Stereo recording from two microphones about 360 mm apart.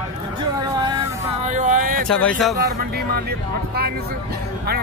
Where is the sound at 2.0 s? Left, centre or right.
Centre.